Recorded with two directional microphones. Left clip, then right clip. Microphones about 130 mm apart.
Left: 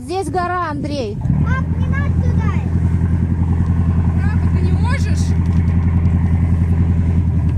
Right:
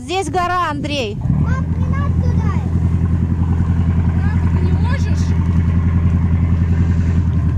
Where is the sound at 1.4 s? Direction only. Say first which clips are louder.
Left 1 dB; 35° left (ahead or behind).